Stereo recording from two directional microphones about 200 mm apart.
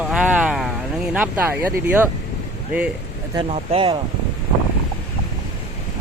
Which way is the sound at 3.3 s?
30° right (ahead or behind).